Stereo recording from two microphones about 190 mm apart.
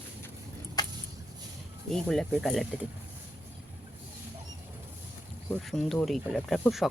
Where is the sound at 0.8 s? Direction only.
20° left (ahead or behind).